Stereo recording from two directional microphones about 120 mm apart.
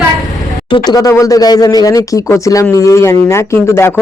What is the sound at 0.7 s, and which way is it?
Speech, 35° left (ahead or behind).